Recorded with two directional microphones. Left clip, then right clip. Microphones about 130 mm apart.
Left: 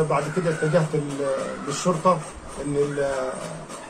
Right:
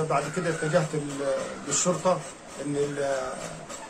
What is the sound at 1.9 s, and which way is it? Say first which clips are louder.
Speech: left 4 dB; 15° right (ahead or behind).